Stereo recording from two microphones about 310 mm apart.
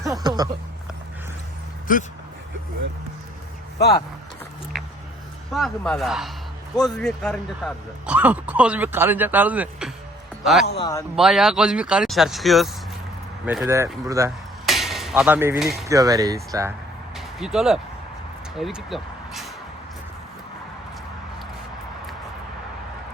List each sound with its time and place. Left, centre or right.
0.0 s a sound: centre
1.9 s speech: left
3.8 s speech: left
5.5 s speech: centre
10.8 s a man's voice: centre
11.2 s speech: centre
16.0 s speech: centre
17.2 s vehicle: centre
18.5 s speech: centre